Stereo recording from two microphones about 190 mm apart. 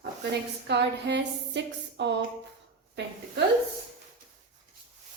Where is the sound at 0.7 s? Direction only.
65° right (ahead or behind).